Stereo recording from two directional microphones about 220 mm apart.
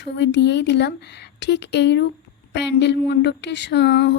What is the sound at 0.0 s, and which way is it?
Speech, 50° left (ahead or behind).